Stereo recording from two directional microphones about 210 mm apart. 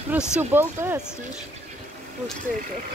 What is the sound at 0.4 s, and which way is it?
Speech, 10° right (ahead or behind).